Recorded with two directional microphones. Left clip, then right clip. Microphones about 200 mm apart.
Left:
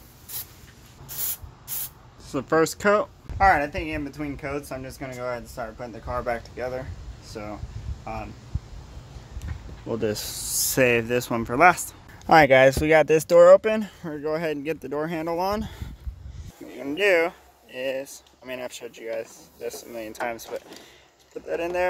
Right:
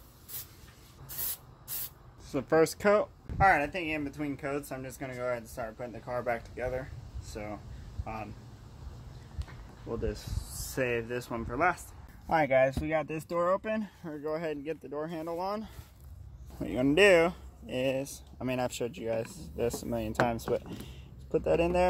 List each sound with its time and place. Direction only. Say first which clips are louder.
2.2 s speech: left 4 dB; centre (ahead or behind)
9.8 s speech: left 9 dB; 55° left (ahead or behind)
10.7 s speech: left 11 dB; 40° left (ahead or behind)
16.7 s speech: left 1 dB; 5° right (ahead or behind)